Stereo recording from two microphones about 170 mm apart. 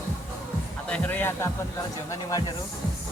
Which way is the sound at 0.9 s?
10° left (ahead or behind).